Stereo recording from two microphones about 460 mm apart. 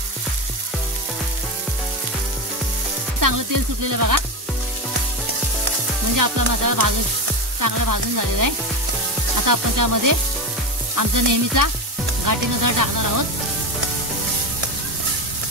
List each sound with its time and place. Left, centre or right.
3.2 s sizzle: right
6.1 s sizzle: right